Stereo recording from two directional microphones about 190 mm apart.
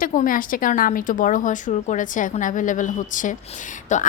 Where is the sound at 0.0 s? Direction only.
45° left (ahead or behind).